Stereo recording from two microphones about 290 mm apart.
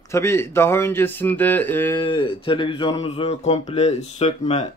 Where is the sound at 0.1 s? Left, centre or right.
Centre.